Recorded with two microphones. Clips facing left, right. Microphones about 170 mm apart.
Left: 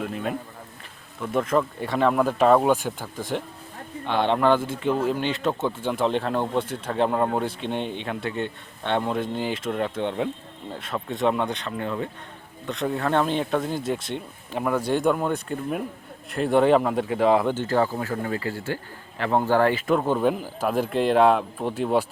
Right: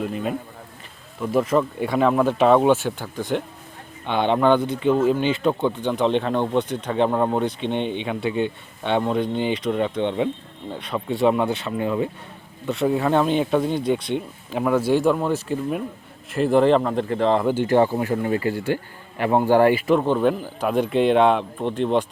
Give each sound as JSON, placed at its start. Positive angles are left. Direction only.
{"t": 0.0, "sound": "speech", "side_deg": 0}
{"t": 17.4, "sound": "speech", "side_deg": -10}
{"t": 19.9, "sound": "speech", "side_deg": 5}